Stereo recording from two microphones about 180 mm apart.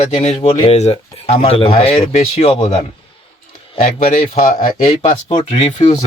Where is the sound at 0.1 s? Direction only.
35° left (ahead or behind).